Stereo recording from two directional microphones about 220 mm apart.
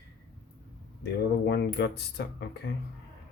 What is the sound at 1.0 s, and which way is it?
Speech, 50° left (ahead or behind).